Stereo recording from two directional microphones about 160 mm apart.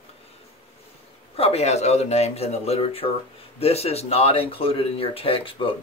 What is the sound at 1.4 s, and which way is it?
Speech, 40° left (ahead or behind).